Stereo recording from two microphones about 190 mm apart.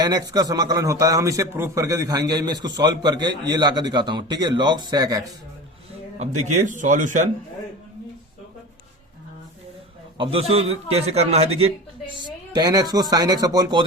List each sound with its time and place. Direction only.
0.0 s a man's voice: 20° right (ahead or behind)
6.1 s speech: 40° right (ahead or behind)
10.2 s speech: 30° right (ahead or behind)
12.1 s a man's voice: 20° right (ahead or behind)